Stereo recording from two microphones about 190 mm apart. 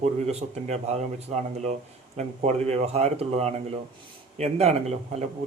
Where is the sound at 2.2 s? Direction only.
35° right (ahead or behind).